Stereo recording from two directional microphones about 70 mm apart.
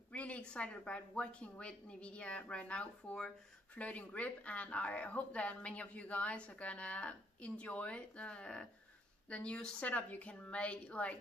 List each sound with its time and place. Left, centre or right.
0.1 s speech: centre